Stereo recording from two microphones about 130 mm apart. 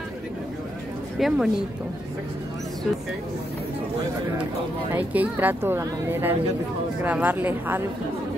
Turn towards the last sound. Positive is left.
turn(degrees=-15)  # may be behind; listen again after turning